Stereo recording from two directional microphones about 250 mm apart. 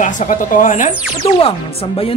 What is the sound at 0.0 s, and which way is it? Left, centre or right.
Speech, left.